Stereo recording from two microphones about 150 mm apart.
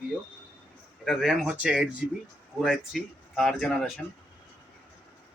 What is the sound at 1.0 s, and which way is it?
Speech, centre (ahead or behind).